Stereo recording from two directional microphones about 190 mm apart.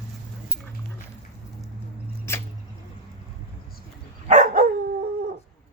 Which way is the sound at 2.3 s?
15° left (ahead or behind).